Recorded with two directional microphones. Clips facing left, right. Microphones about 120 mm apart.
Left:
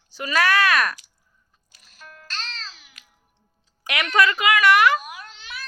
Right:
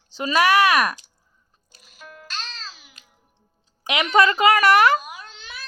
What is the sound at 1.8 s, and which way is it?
Music, 5° right (ahead or behind).